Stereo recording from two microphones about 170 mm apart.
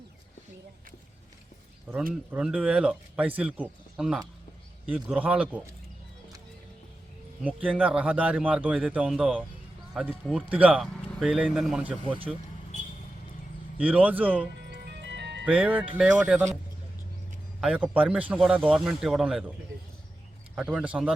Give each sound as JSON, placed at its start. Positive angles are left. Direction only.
{"t": 1.9, "sound": "a man's voice", "side_deg": -5}
{"t": 7.4, "sound": "a man's voice", "side_deg": -10}
{"t": 13.7, "sound": "a man's voice", "side_deg": -10}
{"t": 14.7, "sound": "music", "side_deg": -85}
{"t": 15.4, "sound": "a man's voice", "side_deg": -5}
{"t": 17.6, "sound": "speech", "side_deg": 0}
{"t": 20.6, "sound": "a man's voice", "side_deg": -5}